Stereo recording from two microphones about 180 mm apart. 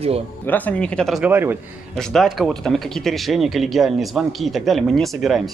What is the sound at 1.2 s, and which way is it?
Speech, 10° right (ahead or behind).